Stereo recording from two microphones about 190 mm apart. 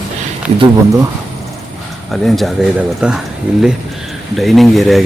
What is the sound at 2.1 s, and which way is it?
Speech, centre (ahead or behind).